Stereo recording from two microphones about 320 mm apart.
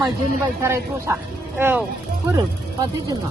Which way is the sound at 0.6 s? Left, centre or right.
Centre.